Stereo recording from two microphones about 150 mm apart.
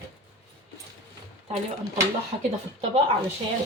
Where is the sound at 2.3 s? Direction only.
50° right (ahead or behind).